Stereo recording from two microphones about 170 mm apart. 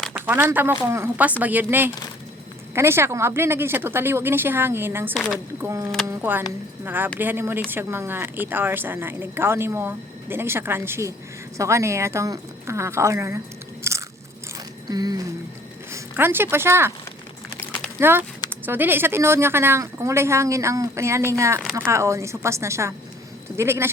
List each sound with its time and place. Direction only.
0.1 s speech: 10° right (ahead or behind)
5.1 s speech: centre (ahead or behind)
5.6 s speech: 20° right (ahead or behind)
13.9 s biting: 15° right (ahead or behind)
14.8 s a sound: 25° right (ahead or behind)
15.9 s speech: 15° right (ahead or behind)
18.0 s speech: 15° right (ahead or behind)
21.6 s speech: 5° right (ahead or behind)
21.8 s speech: 15° right (ahead or behind)